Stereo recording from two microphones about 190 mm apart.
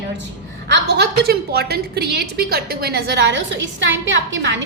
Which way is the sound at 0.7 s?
60° right (ahead or behind).